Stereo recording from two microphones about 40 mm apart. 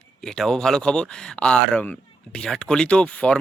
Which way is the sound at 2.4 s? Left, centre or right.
Centre.